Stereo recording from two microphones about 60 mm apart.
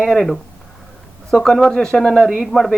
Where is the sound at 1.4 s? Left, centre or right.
Centre.